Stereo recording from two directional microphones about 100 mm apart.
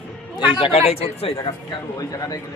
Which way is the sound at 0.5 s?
65° left (ahead or behind).